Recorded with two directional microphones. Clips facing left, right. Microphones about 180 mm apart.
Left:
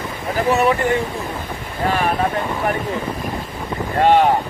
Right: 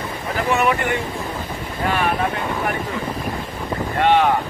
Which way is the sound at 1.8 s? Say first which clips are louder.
Left 2 dB; 35° left (ahead or behind).